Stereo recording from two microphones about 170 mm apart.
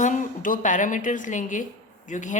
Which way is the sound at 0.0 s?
45° left (ahead or behind).